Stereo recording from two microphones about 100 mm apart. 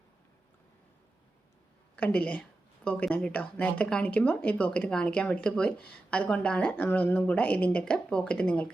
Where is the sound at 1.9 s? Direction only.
15° left (ahead or behind).